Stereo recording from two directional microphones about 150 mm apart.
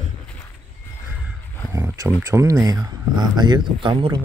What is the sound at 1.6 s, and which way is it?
Speech, 20° right (ahead or behind).